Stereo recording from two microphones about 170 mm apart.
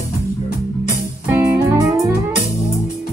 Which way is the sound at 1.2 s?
15° right (ahead or behind).